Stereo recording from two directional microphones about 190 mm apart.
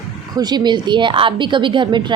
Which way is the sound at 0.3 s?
20° right (ahead or behind).